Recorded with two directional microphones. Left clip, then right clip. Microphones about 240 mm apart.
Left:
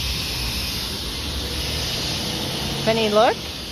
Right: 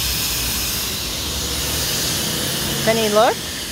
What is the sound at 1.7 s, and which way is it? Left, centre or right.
Spray, right.